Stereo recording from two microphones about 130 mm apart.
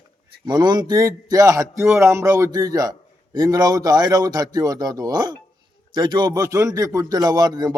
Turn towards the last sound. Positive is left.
turn(degrees=-30)  # may be behind; listen again after turning